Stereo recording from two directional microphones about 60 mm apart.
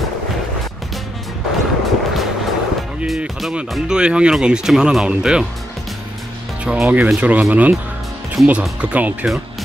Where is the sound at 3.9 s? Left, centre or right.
Centre.